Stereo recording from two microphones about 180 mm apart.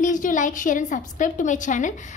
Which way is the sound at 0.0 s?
45° left (ahead or behind).